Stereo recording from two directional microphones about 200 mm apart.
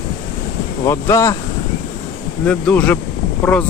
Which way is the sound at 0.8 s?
15° left (ahead or behind).